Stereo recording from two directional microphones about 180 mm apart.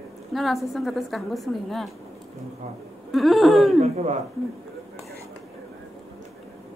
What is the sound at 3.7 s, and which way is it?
Speech, 35° right (ahead or behind).